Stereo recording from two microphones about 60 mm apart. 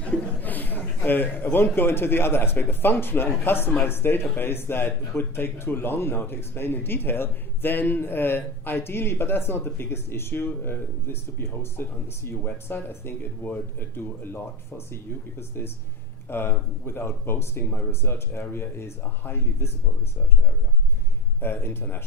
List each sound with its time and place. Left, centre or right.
0.0 s a man's voice: left
21.4 s speech: left